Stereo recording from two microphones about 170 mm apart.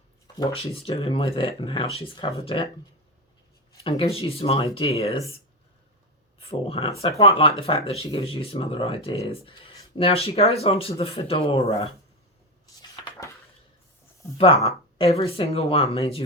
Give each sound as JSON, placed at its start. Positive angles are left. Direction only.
{"t": 0.3, "sound": "speech", "side_deg": 35}
{"t": 2.1, "sound": "speech", "side_deg": 20}
{"t": 2.4, "sound": "speech", "side_deg": 35}
{"t": 3.8, "sound": "speech", "side_deg": 35}
{"t": 6.4, "sound": "speech", "side_deg": 35}
{"t": 12.8, "sound": "dishes", "side_deg": 20}
{"t": 14.3, "sound": "speech", "side_deg": 35}